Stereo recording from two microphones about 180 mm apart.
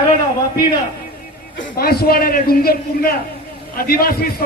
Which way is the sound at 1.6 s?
60° left (ahead or behind).